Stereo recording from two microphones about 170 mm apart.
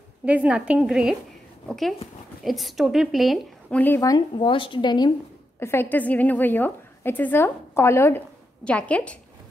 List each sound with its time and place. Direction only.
0.2 s a woman's voice: 10° right (ahead or behind)
3.8 s a woman's voice: 15° left (ahead or behind)
4.4 s a woman's voice: 30° left (ahead or behind)
5.6 s a woman's voice: 15° left (ahead or behind)